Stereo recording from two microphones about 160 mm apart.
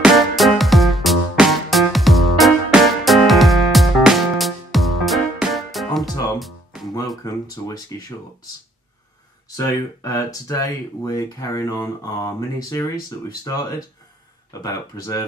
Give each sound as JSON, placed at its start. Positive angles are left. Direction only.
{"t": 0.0, "sound": "music", "side_deg": 0}
{"t": 7.6, "sound": "speech", "side_deg": 20}
{"t": 9.6, "sound": "speech", "side_deg": 20}